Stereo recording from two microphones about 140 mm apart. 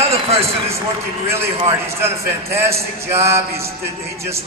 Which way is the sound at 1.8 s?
20° right (ahead or behind).